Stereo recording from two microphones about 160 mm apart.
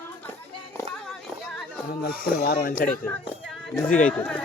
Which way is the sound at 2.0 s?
70° left (ahead or behind).